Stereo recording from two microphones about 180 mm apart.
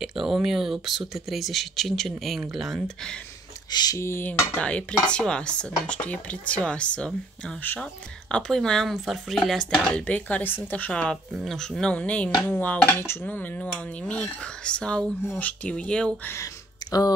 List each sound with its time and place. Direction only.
0.0 s speech: centre (ahead or behind)
3.7 s speech: 20° left (ahead or behind)
16.8 s a sound: 20° left (ahead or behind)